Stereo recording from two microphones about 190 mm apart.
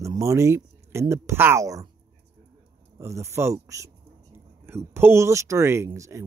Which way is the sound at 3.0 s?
15° right (ahead or behind).